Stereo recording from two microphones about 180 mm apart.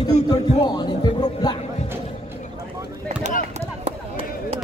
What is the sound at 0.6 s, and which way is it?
Music, 25° left (ahead or behind).